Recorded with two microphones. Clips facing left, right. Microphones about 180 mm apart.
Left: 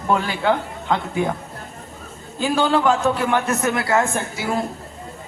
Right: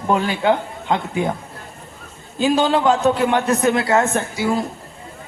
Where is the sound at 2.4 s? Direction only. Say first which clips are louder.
Right 2 dB; 20° right (ahead or behind).